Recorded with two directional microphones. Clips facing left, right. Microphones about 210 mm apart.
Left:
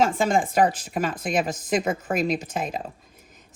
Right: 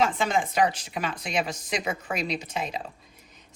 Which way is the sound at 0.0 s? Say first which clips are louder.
Left 4 dB; 45° left (ahead or behind).